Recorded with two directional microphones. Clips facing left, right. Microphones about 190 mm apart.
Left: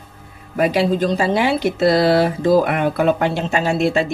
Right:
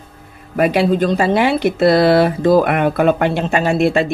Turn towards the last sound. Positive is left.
turn(degrees=-60)  # may be behind; listen again after turning